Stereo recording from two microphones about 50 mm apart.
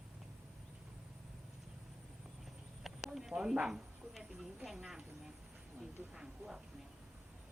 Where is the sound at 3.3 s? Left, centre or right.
Centre.